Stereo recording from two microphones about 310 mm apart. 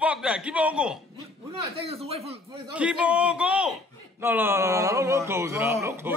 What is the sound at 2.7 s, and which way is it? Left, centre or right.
A man's voice, centre.